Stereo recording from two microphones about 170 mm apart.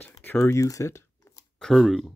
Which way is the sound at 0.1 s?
15° left (ahead or behind).